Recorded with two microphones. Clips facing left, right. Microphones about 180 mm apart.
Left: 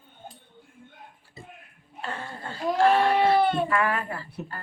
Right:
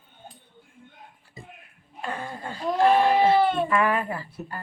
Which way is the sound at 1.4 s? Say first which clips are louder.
Right 1 dB; 15° right (ahead or behind).